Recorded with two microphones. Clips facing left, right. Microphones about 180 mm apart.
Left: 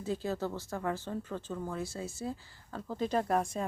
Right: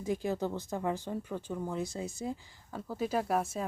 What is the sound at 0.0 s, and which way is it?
Speech, 15° right (ahead or behind).